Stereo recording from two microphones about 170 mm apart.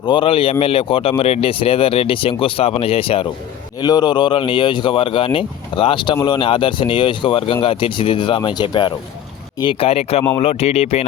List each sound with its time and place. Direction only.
0.1 s speech: 30° left (ahead or behind)